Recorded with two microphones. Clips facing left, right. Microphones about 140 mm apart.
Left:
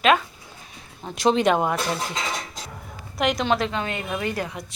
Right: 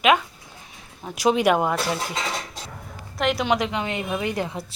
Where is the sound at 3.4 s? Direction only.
15° right (ahead or behind).